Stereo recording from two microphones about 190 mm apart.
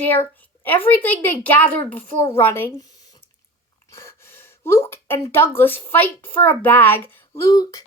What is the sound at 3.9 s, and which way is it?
Speech, 15° left (ahead or behind).